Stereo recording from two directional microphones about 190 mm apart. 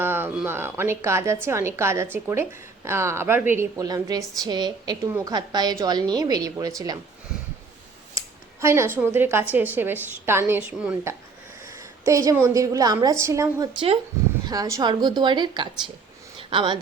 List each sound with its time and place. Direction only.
0.0 s a woman's voice: 10° right (ahead or behind)
8.6 s a woman's voice: 15° right (ahead or behind)
13.7 s speech: 30° right (ahead or behind)
14.4 s a woman's voice: 20° right (ahead or behind)